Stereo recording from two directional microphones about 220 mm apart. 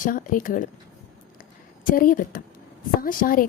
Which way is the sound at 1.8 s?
40° left (ahead or behind).